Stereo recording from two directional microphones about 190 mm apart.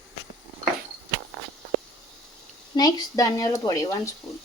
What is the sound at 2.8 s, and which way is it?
Speech, 20° left (ahead or behind).